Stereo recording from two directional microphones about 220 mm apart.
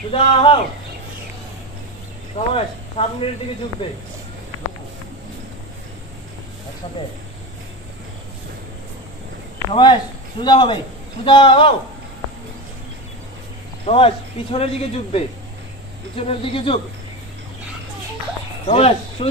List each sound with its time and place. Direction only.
0.1 s speech: 25° left (ahead or behind)
2.3 s speech: 25° left (ahead or behind)
9.7 s speech: 20° left (ahead or behind)
13.8 s speech: 25° left (ahead or behind)
18.7 s speech: 25° left (ahead or behind)